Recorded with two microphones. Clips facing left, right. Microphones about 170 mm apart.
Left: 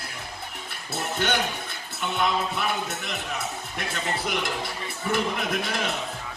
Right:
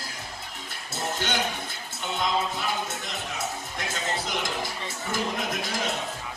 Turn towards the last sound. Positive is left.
turn(degrees=65)  # may be behind; listen again after turning